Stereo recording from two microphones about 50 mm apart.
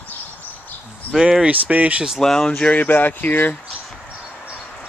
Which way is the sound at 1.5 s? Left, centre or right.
Right.